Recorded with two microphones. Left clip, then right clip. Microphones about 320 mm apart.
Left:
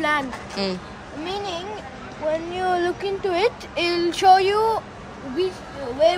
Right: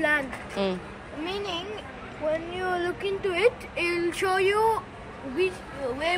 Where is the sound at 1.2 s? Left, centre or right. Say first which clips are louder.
Left 3 dB; left.